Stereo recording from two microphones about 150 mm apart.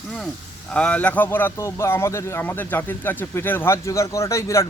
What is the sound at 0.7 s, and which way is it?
A man's voice, 10° left (ahead or behind).